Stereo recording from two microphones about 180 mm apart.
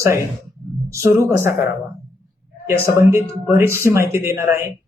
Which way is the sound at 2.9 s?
15° right (ahead or behind).